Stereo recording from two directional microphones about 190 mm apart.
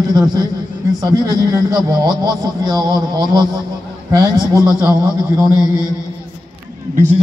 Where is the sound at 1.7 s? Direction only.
20° right (ahead or behind).